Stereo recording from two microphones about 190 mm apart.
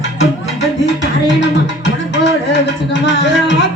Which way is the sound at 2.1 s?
70° left (ahead or behind).